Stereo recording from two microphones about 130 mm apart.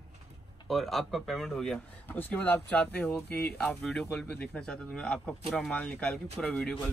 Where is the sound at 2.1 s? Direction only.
15° left (ahead or behind).